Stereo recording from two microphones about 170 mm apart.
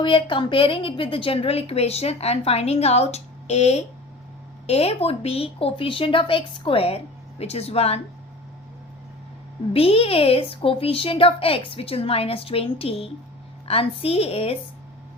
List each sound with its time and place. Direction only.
0.0 s a woman's voice: 30° left (ahead or behind)
9.7 s a woman's voice: 35° left (ahead or behind)